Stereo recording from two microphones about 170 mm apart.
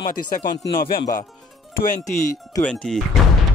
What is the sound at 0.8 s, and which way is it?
Speech, 65° left (ahead or behind).